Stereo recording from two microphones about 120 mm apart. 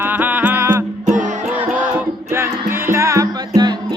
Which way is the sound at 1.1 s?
90° right.